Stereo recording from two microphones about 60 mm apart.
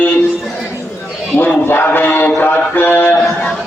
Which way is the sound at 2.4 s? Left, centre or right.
Left.